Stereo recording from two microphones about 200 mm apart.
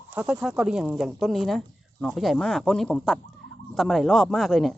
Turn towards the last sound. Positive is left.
turn(degrees=0)  # may be behind; listen again after turning